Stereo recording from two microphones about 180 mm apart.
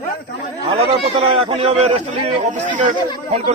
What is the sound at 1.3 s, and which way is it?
A man's voice, 30° right (ahead or behind).